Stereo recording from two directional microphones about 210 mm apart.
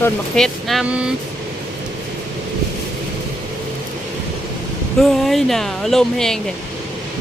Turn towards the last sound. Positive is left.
turn(degrees=0)  # may be behind; listen again after turning